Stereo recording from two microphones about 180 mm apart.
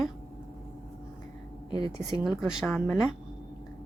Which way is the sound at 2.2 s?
Centre (ahead or behind).